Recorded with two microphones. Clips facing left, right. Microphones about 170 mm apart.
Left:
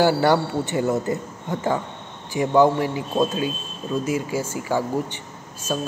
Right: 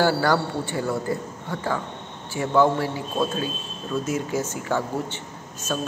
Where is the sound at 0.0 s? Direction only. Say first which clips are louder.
Left 3 dB; 20° left (ahead or behind).